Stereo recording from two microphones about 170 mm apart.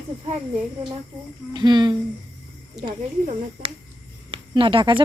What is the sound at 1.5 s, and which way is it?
Speech, 25° right (ahead or behind).